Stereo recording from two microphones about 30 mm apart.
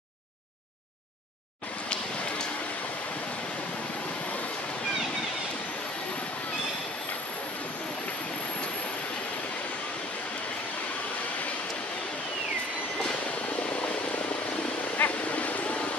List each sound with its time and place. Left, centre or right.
15.0 s vehicle: left
15.3 s vehicle: left